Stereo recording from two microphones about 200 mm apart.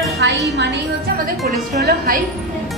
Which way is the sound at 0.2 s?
60° right (ahead or behind).